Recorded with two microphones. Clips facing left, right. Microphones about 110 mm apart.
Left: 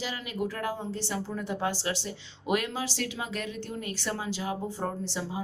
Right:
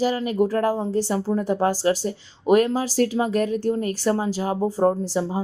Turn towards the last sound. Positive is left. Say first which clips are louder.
# right 9 dB
turn(degrees=-35)  # may be behind; listen again after turning